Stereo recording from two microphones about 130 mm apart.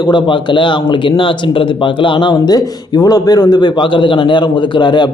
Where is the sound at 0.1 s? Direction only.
40° left (ahead or behind).